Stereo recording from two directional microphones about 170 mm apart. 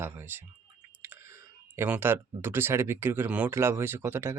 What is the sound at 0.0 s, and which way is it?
Speech, 15° right (ahead or behind).